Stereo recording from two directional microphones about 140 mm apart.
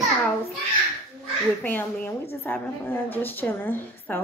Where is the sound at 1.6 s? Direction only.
15° left (ahead or behind).